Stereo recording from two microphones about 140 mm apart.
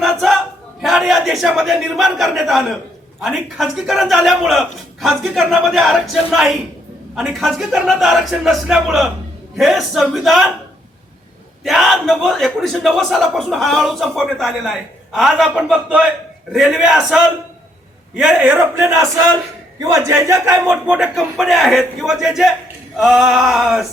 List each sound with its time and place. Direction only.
0.0 s choir: centre (ahead or behind)
0.8 s a man's voice: centre (ahead or behind)
11.6 s a man's voice: centre (ahead or behind); by 20.7 s 20° right (ahead or behind)
20.8 s a man's voice: 5° right (ahead or behind)